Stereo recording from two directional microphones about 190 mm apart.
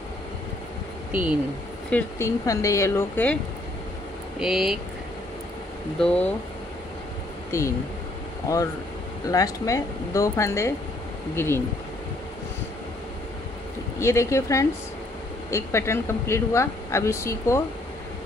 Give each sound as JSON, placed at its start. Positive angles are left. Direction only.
{"t": 1.9, "sound": "speech", "side_deg": 10}
{"t": 4.4, "sound": "speech", "side_deg": 0}
{"t": 5.9, "sound": "speech", "side_deg": 5}
{"t": 7.5, "sound": "speech", "side_deg": 15}
{"t": 9.3, "sound": "speech", "side_deg": 20}
{"t": 13.9, "sound": "speech", "side_deg": 15}